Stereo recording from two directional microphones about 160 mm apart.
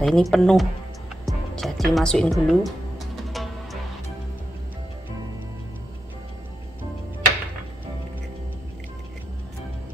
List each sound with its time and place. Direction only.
0.0 s speech: centre (ahead or behind)
3.4 s music: centre (ahead or behind)